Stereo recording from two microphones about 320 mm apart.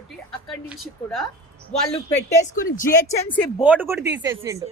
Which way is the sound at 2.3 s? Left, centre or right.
Left.